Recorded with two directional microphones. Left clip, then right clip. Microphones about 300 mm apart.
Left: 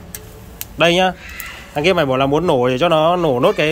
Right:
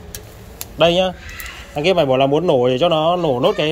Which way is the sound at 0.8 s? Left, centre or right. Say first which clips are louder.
Left 1 dB; centre.